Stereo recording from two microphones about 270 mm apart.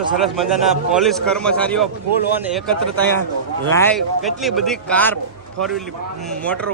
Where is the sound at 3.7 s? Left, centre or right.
Centre.